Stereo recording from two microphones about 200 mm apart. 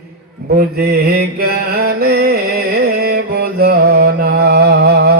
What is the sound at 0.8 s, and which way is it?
Mantra, 50° right (ahead or behind).